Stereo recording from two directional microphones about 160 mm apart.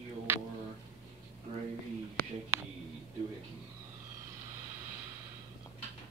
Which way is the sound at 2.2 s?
5° left (ahead or behind).